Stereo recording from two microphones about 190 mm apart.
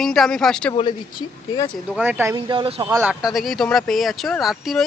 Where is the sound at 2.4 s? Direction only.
25° right (ahead or behind).